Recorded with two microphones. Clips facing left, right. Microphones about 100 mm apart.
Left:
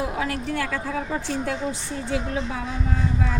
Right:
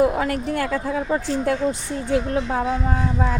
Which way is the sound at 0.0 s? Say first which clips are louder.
Right 7 dB; 50° right (ahead or behind).